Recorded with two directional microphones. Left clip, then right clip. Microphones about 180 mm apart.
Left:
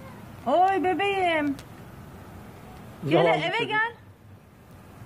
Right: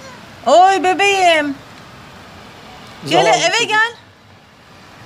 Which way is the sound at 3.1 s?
55° right (ahead or behind).